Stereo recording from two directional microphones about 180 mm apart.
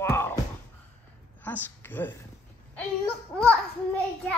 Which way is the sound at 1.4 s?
10° left (ahead or behind).